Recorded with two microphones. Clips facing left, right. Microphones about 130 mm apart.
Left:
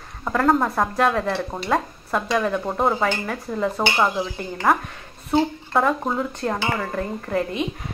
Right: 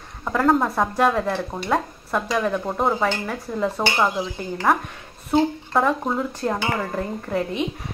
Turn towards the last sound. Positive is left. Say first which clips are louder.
# left 1 dB
turn(degrees=-5)  # may be behind; listen again after turning